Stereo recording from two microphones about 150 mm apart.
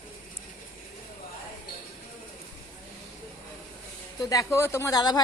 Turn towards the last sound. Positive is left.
turn(degrees=25)  # may be behind; listen again after turning